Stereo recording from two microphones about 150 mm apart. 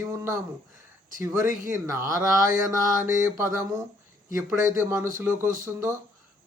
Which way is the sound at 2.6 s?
20° right (ahead or behind).